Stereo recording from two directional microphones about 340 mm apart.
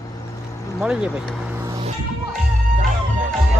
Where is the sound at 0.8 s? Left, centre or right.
Centre.